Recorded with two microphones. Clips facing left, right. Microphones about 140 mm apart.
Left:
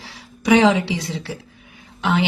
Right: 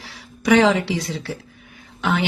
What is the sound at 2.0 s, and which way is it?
Speech, 25° left (ahead or behind).